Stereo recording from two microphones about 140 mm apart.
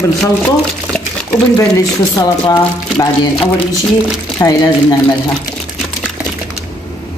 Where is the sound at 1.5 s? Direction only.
20° left (ahead or behind).